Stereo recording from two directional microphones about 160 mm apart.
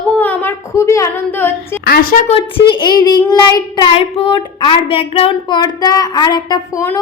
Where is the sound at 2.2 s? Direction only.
35° left (ahead or behind).